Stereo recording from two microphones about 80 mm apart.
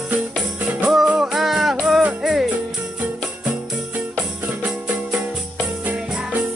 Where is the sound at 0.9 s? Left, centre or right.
Centre.